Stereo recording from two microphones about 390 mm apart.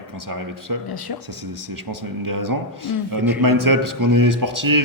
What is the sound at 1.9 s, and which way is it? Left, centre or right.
Speech, right.